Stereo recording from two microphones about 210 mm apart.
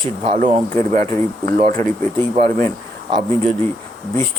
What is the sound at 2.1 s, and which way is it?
Speech, 10° left (ahead or behind).